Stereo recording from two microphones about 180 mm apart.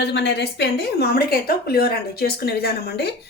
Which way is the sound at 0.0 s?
70° left (ahead or behind).